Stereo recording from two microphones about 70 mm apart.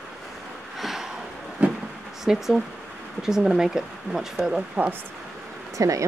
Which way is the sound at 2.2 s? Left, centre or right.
Centre.